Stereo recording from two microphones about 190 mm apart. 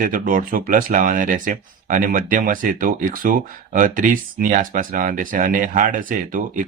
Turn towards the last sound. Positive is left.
turn(degrees=-45)  # may be behind; listen again after turning